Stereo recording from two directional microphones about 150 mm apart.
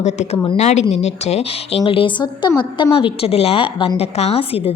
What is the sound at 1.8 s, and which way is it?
A woman's voice, 35° left (ahead or behind).